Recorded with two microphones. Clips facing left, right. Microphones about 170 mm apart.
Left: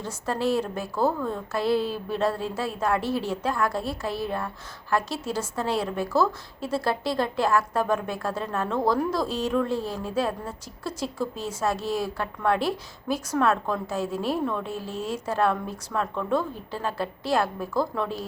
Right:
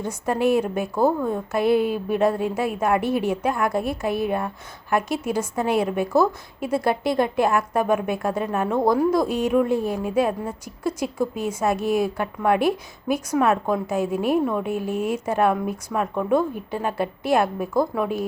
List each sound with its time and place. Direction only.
0.0 s a woman's voice: 15° right (ahead or behind)